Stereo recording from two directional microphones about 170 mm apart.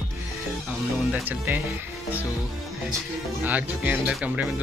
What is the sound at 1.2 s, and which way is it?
Speech, 10° right (ahead or behind).